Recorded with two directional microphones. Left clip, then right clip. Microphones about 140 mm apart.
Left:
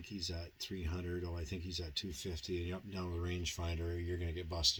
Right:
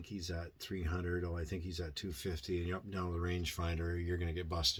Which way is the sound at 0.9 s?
5° left (ahead or behind).